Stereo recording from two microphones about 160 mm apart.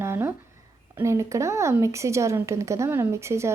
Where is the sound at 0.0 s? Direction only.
15° right (ahead or behind).